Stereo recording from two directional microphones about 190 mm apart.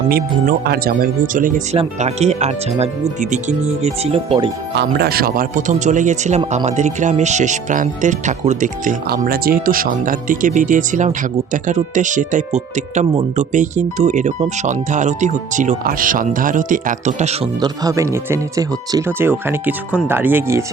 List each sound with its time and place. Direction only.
0.6 s speech: 55° right (ahead or behind); by 4.5 s 25° right (ahead or behind)
4.7 s speech: 60° right (ahead or behind); by 17.5 s 35° right (ahead or behind)
17.6 s speech: 15° right (ahead or behind)